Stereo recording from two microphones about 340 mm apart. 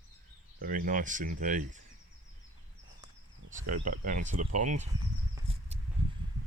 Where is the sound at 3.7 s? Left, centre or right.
Right.